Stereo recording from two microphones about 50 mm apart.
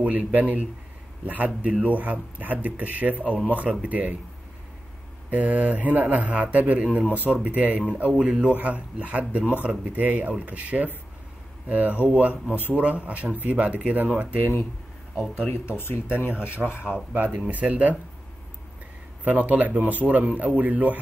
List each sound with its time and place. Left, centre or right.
0.0 s speech: right
5.3 s speech: right
7.1 s speech: right
14.4 s speech: left
15.5 s speech: left
17.1 s speech: right
19.2 s speech: right